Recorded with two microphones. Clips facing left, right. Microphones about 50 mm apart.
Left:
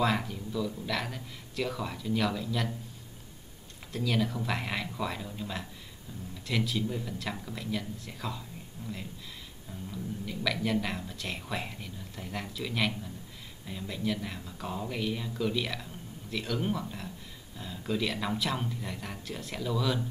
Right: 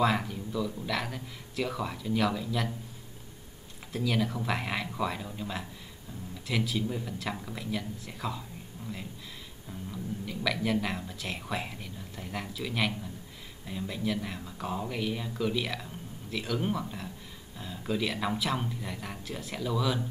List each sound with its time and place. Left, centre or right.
0.0 s speech: centre
3.9 s speech: centre
8.8 s a sound: centre
9.8 s speech: centre